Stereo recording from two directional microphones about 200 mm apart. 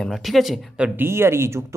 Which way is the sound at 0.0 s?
Centre (ahead or behind).